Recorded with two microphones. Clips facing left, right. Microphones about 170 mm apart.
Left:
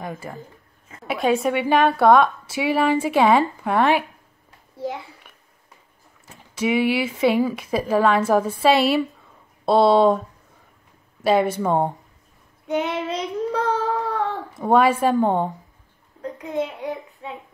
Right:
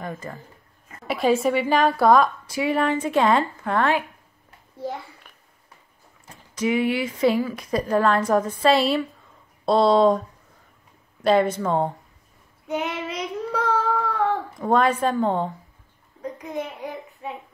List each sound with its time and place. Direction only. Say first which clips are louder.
0.0 s a woman's voice: left 1 dB; 10° left (ahead or behind)
1.0 s a woman's voice: even; centre (ahead or behind)
6.7 s speech: left 2 dB; 90° left
7.1 s a woman's voice: left 2 dB; 5° left (ahead or behind)
11.2 s a woman's voice: left 1 dB; 5° left (ahead or behind)
12.6 s child singing: left 4 dB; 30° left (ahead or behind)
14.6 s a woman's voice: left 4 dB; 5° left (ahead or behind)
16.2 s a child's voice: left 4 dB; 10° right (ahead or behind)